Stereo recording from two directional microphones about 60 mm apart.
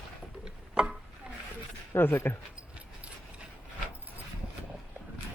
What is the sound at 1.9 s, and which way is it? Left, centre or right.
Speech, left.